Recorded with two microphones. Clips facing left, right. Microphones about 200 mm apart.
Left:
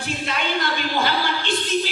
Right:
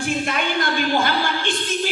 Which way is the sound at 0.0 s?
50° right (ahead or behind).